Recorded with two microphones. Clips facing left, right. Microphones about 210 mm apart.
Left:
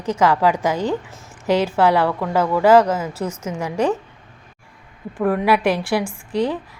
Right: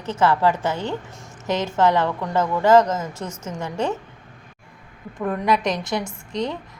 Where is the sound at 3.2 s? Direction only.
10° left (ahead or behind).